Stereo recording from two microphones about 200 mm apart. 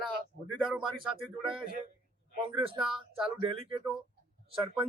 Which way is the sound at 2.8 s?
Centre (ahead or behind).